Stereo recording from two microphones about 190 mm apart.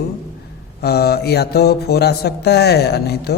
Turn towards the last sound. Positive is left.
turn(degrees=60)  # may be behind; listen again after turning